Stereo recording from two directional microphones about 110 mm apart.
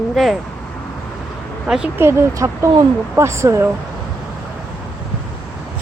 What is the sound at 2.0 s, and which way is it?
Speech, 25° right (ahead or behind).